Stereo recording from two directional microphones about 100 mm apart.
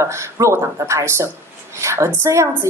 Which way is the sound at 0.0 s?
30° right (ahead or behind).